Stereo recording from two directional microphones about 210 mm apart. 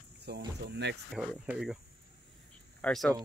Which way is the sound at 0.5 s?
55° right (ahead or behind).